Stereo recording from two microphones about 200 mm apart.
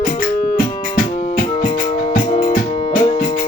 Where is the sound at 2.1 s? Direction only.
45° left (ahead or behind).